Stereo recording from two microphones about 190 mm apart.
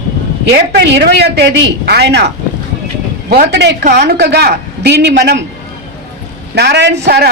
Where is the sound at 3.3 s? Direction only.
60° right (ahead or behind).